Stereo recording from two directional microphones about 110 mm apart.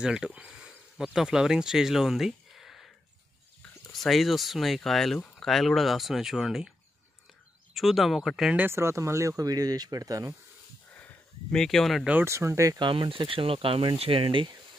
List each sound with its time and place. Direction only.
0.0 s speech: 10° right (ahead or behind)
3.9 s speech: centre (ahead or behind)
7.7 s speech: centre (ahead or behind)
8.5 s speech: 20° right (ahead or behind)
11.5 s speech: 5° left (ahead or behind)
12.1 s speech: 20° right (ahead or behind)
12.7 s speech: 45° right (ahead or behind)